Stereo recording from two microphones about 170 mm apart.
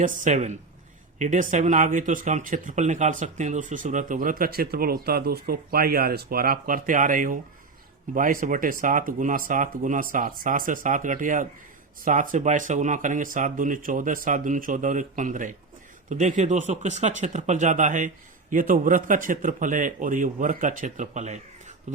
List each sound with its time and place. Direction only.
0.0 s speech: 50° right (ahead or behind)